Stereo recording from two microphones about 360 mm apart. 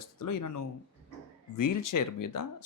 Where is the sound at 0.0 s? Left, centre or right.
Left.